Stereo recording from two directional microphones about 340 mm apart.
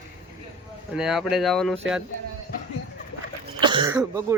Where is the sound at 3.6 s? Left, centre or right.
Centre.